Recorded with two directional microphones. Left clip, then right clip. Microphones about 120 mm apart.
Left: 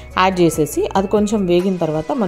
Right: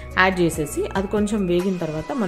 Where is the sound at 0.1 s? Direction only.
45° left (ahead or behind).